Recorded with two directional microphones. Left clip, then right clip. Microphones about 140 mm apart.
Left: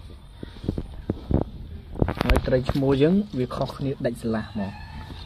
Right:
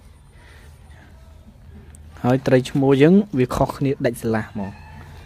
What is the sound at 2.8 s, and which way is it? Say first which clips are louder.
Speech: right 6 dB; 40° right (ahead or behind).